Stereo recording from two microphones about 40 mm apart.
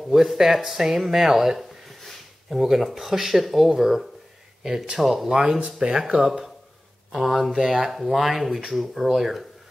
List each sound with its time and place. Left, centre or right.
0.1 s speech: centre
0.8 s a sound: centre
2.6 s speech: centre
7.1 s speech: centre